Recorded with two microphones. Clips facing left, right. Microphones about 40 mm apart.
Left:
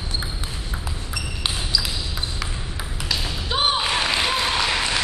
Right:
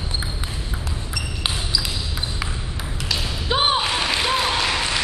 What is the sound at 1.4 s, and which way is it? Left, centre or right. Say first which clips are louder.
Basketball bounce: even; centre.